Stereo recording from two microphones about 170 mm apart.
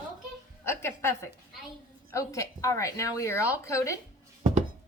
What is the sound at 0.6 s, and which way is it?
Speech, 15° left (ahead or behind).